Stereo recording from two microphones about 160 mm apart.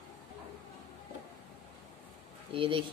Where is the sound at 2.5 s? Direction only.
35° right (ahead or behind).